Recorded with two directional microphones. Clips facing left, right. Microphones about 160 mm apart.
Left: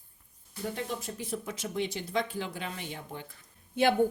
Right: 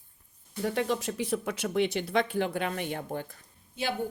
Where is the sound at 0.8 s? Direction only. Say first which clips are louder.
Right 7 dB; 85° right; by 3.2 s 50° right (ahead or behind).